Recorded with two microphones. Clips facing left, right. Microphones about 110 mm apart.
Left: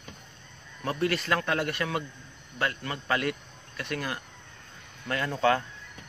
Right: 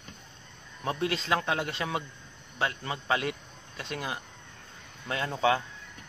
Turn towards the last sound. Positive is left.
turn(degrees=-15)  # may be behind; listen again after turning